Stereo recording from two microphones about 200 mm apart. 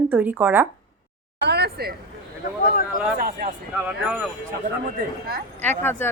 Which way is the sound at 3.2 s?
45° right (ahead or behind).